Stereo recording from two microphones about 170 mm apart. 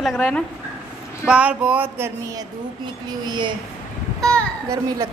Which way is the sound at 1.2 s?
5° right (ahead or behind).